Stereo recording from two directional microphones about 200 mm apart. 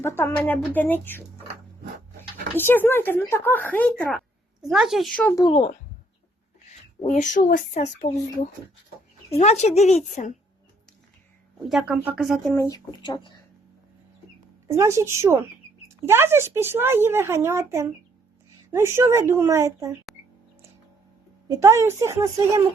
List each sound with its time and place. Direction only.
0.0 s speech: 10° left (ahead or behind)
2.6 s speech: 10° left (ahead or behind)
5.4 s speech: 25° left (ahead or behind)
11.7 s speech: 5° right (ahead or behind)
12.5 s speech: 15° left (ahead or behind)
14.8 s speech: 15° right (ahead or behind)
21.4 s speech: 15° right (ahead or behind)